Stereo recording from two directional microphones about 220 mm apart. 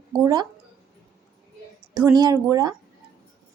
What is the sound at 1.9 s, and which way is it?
Speech, 20° right (ahead or behind).